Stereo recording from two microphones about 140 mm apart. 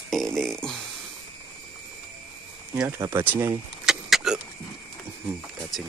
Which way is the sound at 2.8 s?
20° right (ahead or behind).